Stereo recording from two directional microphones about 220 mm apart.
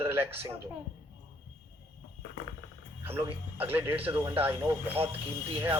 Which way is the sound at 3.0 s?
10° right (ahead or behind).